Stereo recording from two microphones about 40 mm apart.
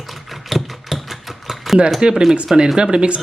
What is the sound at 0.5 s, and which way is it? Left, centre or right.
Mechanisms, centre.